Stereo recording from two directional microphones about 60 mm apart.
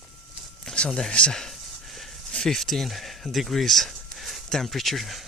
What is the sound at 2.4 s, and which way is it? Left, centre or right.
Speech, centre.